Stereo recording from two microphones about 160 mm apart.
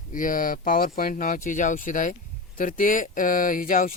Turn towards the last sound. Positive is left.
turn(degrees=55)  # may be behind; listen again after turning